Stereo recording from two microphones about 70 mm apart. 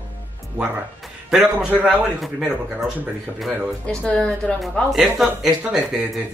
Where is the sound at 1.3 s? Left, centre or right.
Centre.